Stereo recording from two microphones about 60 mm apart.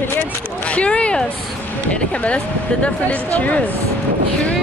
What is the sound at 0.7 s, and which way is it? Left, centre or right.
Speech, left.